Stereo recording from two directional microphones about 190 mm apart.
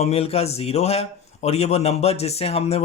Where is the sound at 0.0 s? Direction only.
30° left (ahead or behind).